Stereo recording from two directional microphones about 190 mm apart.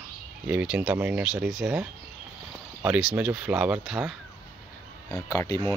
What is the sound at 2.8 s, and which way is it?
Speech, 5° right (ahead or behind).